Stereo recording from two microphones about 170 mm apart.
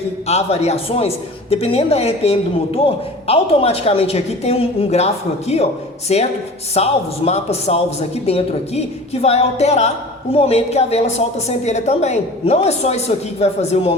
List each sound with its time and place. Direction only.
0.3 s a man's voice: 40° left (ahead or behind)